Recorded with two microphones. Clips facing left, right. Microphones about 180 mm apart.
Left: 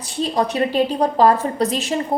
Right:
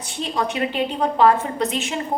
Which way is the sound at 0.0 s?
35° left (ahead or behind).